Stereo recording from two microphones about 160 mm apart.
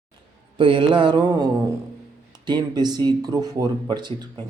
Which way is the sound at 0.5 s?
30° right (ahead or behind).